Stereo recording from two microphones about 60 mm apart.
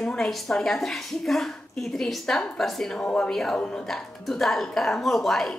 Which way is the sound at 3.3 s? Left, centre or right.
Centre.